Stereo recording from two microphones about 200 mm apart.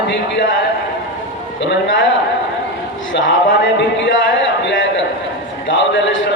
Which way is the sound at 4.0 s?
65° left (ahead or behind).